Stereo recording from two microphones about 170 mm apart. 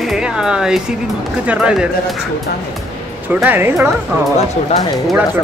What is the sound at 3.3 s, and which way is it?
Speech, 10° right (ahead or behind).